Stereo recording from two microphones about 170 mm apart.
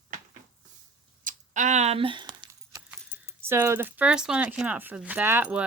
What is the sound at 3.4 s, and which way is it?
Speech, 15° right (ahead or behind).